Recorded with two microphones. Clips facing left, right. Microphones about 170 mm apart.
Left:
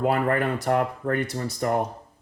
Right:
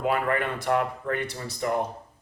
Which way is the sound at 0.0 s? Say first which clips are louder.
Left 3 dB; 40° left (ahead or behind).